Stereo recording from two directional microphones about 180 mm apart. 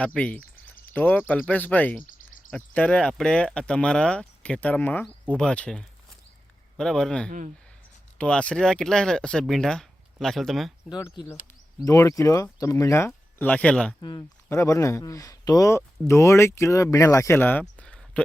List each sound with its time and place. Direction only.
0.0 s speech: 5° left (ahead or behind)
2.0 s a sound: 45° left (ahead or behind)
2.5 s speech: 10° left (ahead or behind)
7.3 s speech: 45° right (ahead or behind)
8.2 s speech: 5° left (ahead or behind)
10.8 s speech: 20° left (ahead or behind)
14.0 s speech: 20° left (ahead or behind); by 18.2 s 5° left (ahead or behind)